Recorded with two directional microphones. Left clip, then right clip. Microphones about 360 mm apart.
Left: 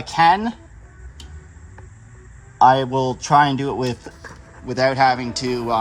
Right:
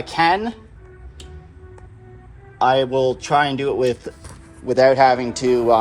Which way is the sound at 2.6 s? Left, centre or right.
Centre.